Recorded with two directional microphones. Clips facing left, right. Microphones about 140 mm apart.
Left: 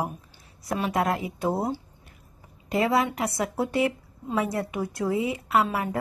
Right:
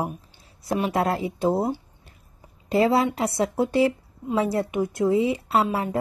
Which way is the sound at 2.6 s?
30° right (ahead or behind).